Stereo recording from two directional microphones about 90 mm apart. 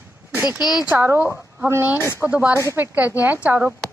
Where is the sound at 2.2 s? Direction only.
15° right (ahead or behind).